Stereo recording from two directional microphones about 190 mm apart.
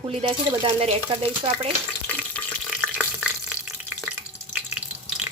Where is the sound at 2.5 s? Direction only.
5° left (ahead or behind).